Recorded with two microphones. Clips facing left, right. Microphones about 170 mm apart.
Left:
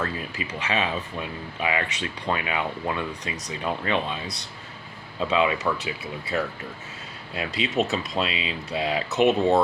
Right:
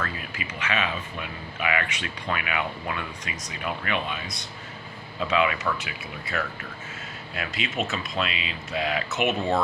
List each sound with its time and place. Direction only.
0.2 s speech: 35° left (ahead or behind)